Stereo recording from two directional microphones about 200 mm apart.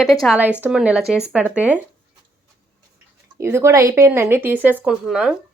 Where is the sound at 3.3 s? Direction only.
15° right (ahead or behind).